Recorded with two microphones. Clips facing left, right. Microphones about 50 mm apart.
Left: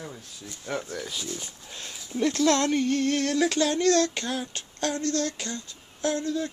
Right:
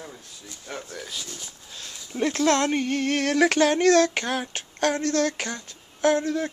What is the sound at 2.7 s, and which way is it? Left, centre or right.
Music, right.